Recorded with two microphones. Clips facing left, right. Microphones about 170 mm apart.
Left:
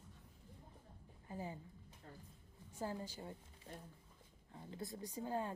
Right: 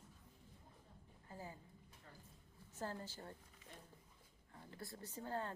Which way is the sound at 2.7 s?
15° left (ahead or behind).